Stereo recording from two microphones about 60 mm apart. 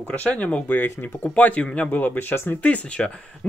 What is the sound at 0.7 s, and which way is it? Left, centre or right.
Speech, left.